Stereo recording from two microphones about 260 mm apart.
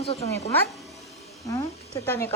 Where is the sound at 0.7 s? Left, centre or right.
Centre.